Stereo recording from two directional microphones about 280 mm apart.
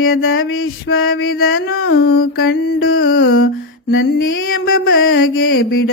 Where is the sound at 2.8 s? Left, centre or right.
Left.